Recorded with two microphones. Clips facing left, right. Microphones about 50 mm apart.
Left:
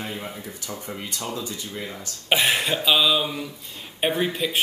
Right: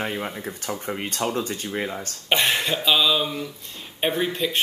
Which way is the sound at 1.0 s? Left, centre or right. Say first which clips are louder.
Right 6 dB; right.